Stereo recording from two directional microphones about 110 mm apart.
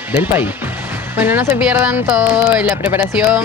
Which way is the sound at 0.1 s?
15° right (ahead or behind).